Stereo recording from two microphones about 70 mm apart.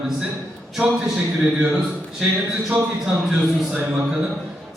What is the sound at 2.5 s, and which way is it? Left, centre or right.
A man's voice, centre.